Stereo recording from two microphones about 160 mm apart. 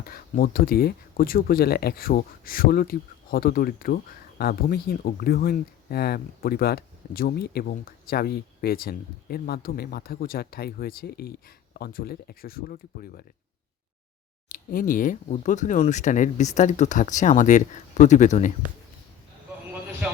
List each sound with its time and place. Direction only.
0.0 s speech: 70° left (ahead or behind)
14.5 s speech: 60° left (ahead or behind)